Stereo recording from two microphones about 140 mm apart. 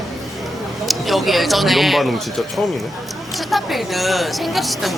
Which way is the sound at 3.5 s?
Centre (ahead or behind).